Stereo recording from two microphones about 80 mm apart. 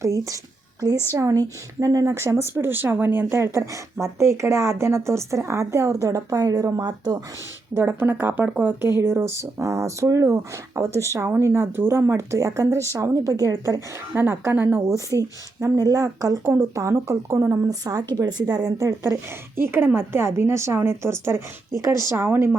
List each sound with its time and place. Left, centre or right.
0.0 s a woman's voice: right
7.8 s a woman's voice: right
9.4 s a woman's voice: right
11.3 s a woman's voice: right
14.2 s speech: right
14.8 s a woman's voice: right
18.8 s a woman's voice: right
22.1 s speech: right